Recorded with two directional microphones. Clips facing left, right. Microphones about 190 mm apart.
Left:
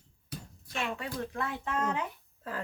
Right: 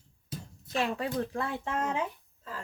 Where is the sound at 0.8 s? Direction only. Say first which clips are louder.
Right 5 dB; 35° right (ahead or behind).